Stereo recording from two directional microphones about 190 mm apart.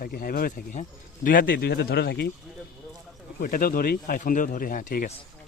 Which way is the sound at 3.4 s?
45° left (ahead or behind).